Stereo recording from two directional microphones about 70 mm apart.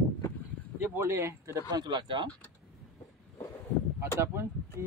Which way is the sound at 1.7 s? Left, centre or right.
Right.